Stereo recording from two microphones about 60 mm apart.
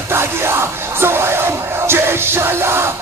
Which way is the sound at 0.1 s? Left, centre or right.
Right.